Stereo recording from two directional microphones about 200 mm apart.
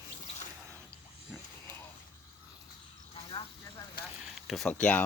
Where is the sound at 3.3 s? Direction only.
30° left (ahead or behind).